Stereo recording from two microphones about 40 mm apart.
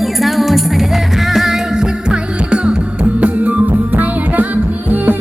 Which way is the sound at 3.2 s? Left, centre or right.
Right.